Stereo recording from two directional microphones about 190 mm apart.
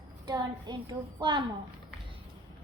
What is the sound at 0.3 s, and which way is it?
A child's voice, 20° right (ahead or behind).